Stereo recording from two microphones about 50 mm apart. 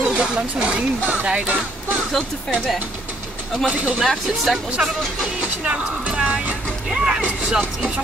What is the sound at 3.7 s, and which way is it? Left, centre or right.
Speech, right.